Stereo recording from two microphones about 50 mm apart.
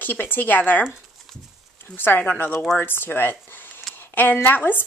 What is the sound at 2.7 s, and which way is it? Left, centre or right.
Speech, left.